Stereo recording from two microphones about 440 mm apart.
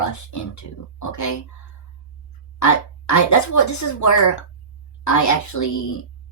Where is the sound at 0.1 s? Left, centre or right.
Left.